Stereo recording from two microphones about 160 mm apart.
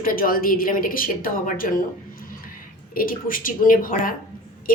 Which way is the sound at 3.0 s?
60° left (ahead or behind).